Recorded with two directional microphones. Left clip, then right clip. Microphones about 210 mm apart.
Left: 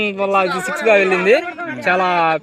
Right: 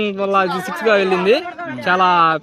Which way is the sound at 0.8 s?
50° right (ahead or behind).